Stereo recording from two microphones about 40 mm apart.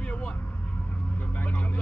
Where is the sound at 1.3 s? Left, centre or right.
Left.